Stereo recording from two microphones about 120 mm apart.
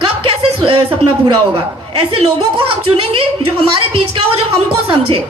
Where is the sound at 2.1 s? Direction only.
45° right (ahead or behind).